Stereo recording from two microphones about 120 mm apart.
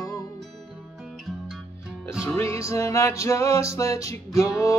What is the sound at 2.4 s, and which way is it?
Music, 25° left (ahead or behind).